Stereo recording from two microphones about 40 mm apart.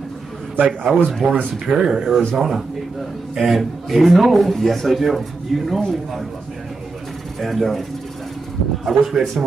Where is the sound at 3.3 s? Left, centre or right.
Centre.